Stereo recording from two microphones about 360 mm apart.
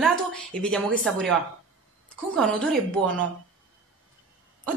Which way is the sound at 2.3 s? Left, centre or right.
Centre.